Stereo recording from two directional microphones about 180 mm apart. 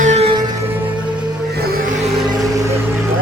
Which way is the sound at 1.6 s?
55° right (ahead or behind).